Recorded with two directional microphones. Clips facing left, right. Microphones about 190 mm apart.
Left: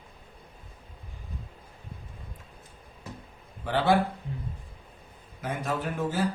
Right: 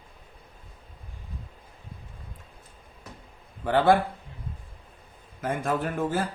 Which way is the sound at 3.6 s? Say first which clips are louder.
Right 4 dB; 50° right (ahead or behind).